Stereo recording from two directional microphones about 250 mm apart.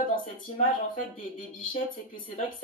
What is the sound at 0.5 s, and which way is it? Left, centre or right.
Speech, left.